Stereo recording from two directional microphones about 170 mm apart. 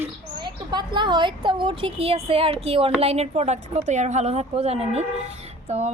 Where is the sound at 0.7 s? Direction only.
25° right (ahead or behind).